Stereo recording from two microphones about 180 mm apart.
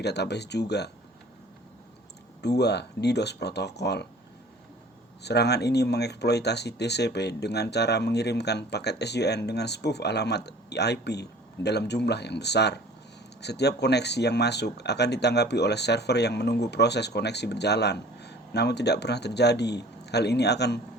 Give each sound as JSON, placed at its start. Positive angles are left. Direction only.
{"t": 0.0, "sound": "speech", "side_deg": 70}
{"t": 2.4, "sound": "speech", "side_deg": 65}
{"t": 5.2, "sound": "speech", "side_deg": 65}